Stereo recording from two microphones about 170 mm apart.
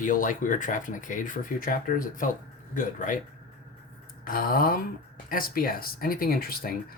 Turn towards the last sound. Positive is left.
turn(degrees=60)  # may be behind; listen again after turning